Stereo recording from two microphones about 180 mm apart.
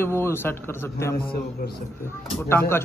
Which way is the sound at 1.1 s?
60° left (ahead or behind).